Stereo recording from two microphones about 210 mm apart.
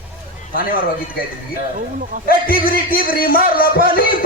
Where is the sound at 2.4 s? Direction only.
45° left (ahead or behind).